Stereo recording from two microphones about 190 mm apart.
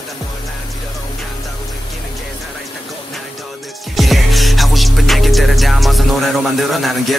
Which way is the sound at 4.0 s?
Centre (ahead or behind).